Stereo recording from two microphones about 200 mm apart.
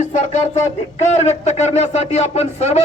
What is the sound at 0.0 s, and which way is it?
A man's voice, 35° left (ahead or behind).